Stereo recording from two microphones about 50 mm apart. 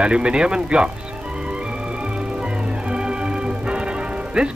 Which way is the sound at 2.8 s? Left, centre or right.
Centre.